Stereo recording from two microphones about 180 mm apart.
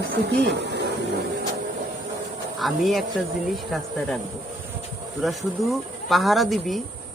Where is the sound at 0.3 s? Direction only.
70° right (ahead or behind).